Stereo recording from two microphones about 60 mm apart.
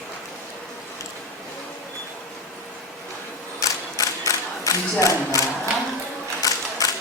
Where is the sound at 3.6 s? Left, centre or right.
Left.